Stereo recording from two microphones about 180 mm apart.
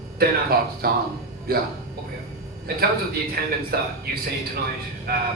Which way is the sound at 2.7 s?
55° right (ahead or behind).